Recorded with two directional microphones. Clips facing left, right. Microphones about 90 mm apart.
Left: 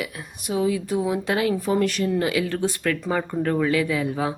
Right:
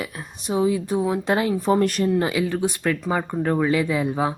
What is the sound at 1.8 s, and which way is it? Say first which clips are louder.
Speech: right 2 dB; 45° right (ahead or behind).